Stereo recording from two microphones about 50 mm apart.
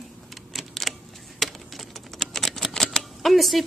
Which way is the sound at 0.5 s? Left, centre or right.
Centre.